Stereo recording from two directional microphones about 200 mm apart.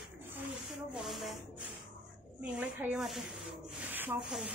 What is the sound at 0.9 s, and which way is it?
Speech, centre (ahead or behind).